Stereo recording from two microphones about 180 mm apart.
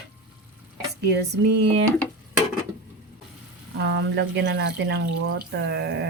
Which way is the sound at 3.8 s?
75° right (ahead or behind).